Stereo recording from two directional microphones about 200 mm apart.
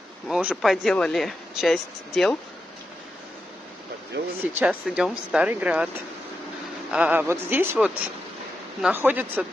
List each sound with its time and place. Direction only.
0.3 s speech: 5° right (ahead or behind)
4.1 s speech: 60° right (ahead or behind)
4.6 s speech: 5° right (ahead or behind)
6.9 s speech: 5° right (ahead or behind)